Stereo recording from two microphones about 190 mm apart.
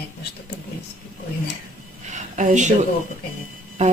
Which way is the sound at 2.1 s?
40° right (ahead or behind).